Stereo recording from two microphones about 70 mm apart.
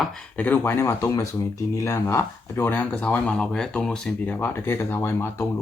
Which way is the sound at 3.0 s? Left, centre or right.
Centre.